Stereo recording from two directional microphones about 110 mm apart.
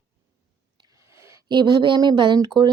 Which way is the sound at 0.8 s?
30° right (ahead or behind).